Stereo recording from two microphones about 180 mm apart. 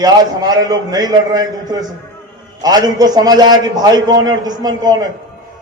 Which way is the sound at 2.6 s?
20° right (ahead or behind).